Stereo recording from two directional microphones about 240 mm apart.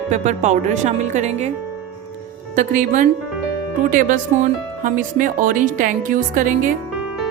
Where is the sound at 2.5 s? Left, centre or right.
Right.